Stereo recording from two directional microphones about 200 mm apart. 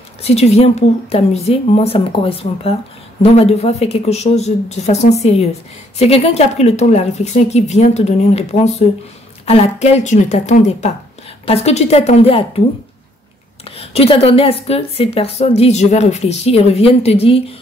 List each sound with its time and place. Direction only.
0.2 s a woman's voice: 30° left (ahead or behind)
13.7 s a woman's voice: 30° left (ahead or behind)